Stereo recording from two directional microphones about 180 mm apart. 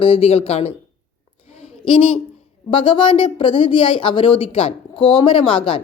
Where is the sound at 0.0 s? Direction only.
30° left (ahead or behind).